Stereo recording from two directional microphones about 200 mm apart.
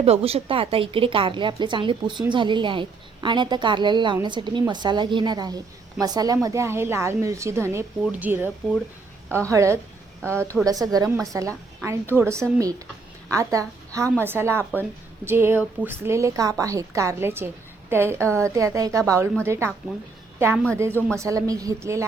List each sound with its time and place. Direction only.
0.0 s a woman's voice: 30° right (ahead or behind); by 8.4 s 10° right (ahead or behind)
9.5 s a woman's voice: 15° right (ahead or behind)
10.3 s a woman's voice: 5° left (ahead or behind)
10.7 s a woman's voice: 15° right (ahead or behind)
21.2 s a woman's voice: 15° right (ahead or behind)